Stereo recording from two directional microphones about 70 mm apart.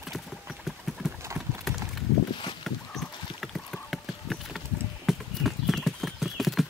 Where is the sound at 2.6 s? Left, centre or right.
Centre.